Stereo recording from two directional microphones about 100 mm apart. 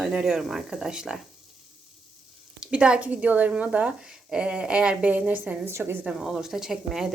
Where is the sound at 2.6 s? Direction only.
10° right (ahead or behind).